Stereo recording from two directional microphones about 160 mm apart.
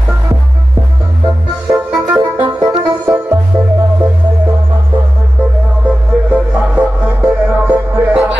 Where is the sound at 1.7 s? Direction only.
10° right (ahead or behind).